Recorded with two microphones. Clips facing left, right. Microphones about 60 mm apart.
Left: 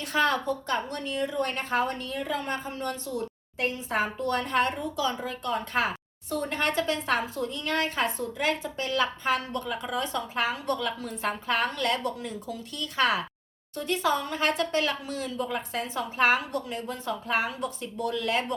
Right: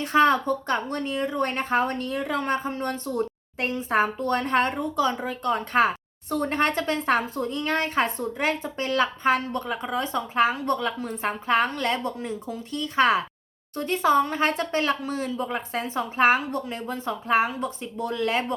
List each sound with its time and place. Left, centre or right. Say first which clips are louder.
0.0 s a woman's voice: right 6 dB; right